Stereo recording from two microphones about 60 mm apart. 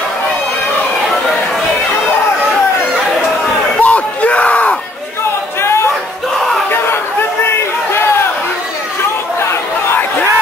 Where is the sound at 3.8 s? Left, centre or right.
Left.